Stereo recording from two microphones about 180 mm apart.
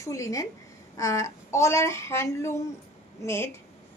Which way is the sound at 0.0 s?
15° left (ahead or behind).